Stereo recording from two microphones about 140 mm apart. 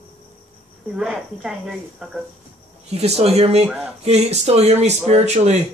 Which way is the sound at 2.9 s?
50° right (ahead or behind).